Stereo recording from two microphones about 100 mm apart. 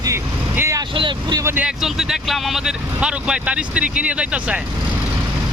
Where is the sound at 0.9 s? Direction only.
55° right (ahead or behind).